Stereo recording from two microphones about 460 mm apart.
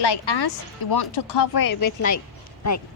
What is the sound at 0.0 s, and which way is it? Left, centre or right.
Speech, left.